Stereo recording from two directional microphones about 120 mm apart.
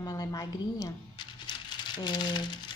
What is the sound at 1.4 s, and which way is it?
Crumpling, 40° left (ahead or behind).